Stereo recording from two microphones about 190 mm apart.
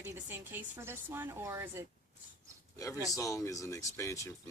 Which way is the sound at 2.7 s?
15° left (ahead or behind).